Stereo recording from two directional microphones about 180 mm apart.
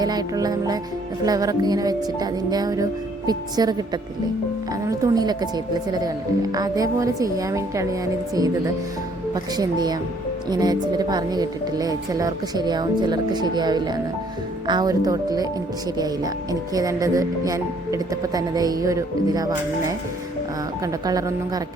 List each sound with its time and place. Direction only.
0.0 s speech: 20° right (ahead or behind)